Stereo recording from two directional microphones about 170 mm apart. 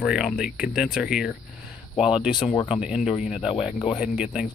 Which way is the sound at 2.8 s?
5° right (ahead or behind).